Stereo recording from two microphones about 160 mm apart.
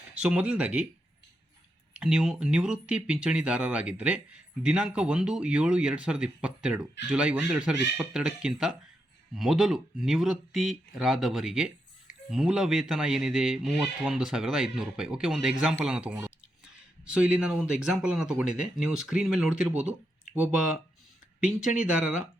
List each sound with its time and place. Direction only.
0.1 s speech: 10° right (ahead or behind)
1.9 s speech: 5° right (ahead or behind)